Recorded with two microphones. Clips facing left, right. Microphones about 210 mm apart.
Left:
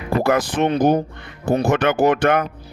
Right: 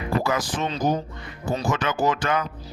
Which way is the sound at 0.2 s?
60° left (ahead or behind).